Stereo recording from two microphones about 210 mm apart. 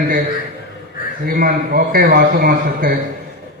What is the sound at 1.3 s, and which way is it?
A man's voice, 45° right (ahead or behind).